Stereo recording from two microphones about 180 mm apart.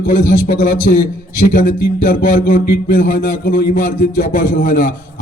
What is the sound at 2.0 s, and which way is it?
A man's voice, 50° left (ahead or behind).